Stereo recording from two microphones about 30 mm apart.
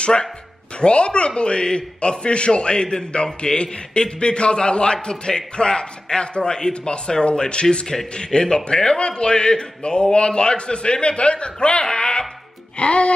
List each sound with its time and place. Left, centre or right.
0.0 s a man's voice: left
12.7 s a man's voice: left